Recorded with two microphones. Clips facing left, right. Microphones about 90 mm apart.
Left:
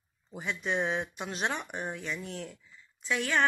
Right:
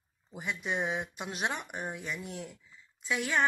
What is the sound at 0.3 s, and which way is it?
Speech, 5° right (ahead or behind).